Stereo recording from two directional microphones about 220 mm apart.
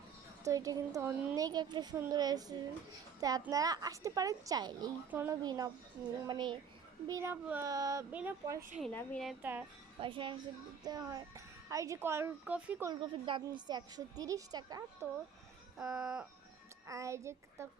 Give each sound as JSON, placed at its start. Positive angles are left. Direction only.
{"t": 0.4, "sound": "a child's voice", "side_deg": -15}
{"t": 1.5, "sound": "a child's voice", "side_deg": -20}
{"t": 8.8, "sound": "speech", "side_deg": 5}
{"t": 9.4, "sound": "a child's voice", "side_deg": -5}
{"t": 10.0, "sound": "a child's voice", "side_deg": -20}
{"t": 12.9, "sound": "a child's voice", "side_deg": -20}
{"t": 15.8, "sound": "speech", "side_deg": -5}
{"t": 16.8, "sound": "a woman's voice", "side_deg": -15}